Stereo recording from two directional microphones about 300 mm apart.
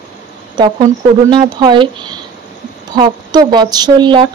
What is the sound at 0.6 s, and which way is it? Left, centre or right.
A woman's voice, centre.